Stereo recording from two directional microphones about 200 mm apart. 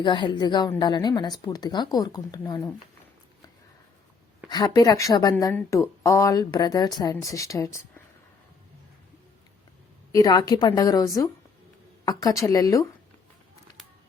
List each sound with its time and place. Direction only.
0.0 s a woman's voice: 25° left (ahead or behind)
4.4 s a woman's voice: 20° left (ahead or behind)
10.1 s a woman's voice: 20° left (ahead or behind)